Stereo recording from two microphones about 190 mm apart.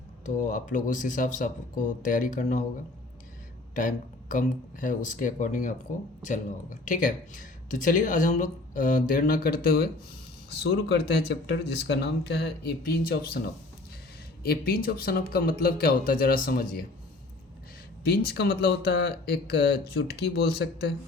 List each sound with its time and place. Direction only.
0.3 s speech: 45° left (ahead or behind)
3.8 s speech: 45° left (ahead or behind)
14.4 s speech: 55° left (ahead or behind)
18.0 s speech: 55° left (ahead or behind)